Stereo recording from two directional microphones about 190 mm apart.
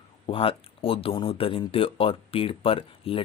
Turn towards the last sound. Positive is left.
turn(degrees=30)  # may be behind; listen again after turning